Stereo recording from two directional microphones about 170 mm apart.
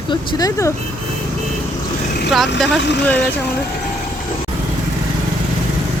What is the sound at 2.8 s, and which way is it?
Speech, 90° left.